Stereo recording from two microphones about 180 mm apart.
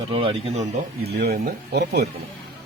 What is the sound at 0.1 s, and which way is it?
Speech, 30° right (ahead or behind).